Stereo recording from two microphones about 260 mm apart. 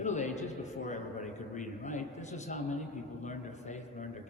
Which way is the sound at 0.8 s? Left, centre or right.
Left.